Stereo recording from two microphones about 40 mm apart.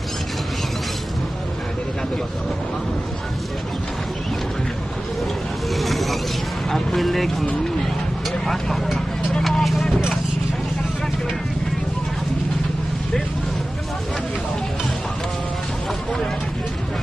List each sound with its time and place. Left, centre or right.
5.8 s a sound: centre
6.7 s speech: centre
8.5 s speech: centre
9.4 s vehicle: centre